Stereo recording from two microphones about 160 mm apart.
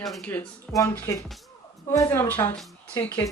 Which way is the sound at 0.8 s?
20° left (ahead or behind).